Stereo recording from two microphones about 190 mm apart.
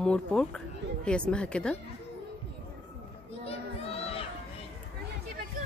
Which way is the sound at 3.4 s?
30° left (ahead or behind).